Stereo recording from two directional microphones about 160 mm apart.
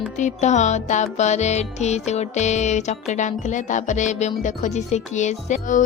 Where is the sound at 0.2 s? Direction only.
50° left (ahead or behind).